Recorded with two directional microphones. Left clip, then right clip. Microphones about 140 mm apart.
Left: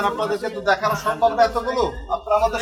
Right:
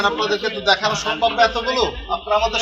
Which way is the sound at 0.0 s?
65° left (ahead or behind).